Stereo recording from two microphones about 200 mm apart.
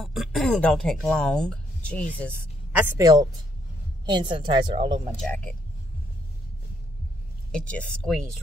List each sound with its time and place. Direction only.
0.0 s a man's voice: centre (ahead or behind)
2.7 s a woman's voice: 15° right (ahead or behind)
5.2 s a man's voice: 5° left (ahead or behind)
7.5 s speech: 5° left (ahead or behind)